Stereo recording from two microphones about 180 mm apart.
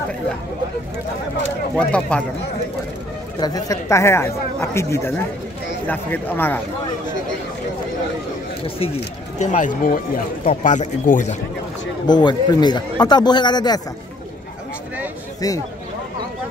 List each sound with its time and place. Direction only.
1.8 s speech: 5° left (ahead or behind)
3.3 s speech: 20° left (ahead or behind)
8.6 s speech: 30° left (ahead or behind)
9.4 s speech: 45° left (ahead or behind)
12.1 s a man's voice: 25° left (ahead or behind)
15.4 s a man's voice: 20° left (ahead or behind)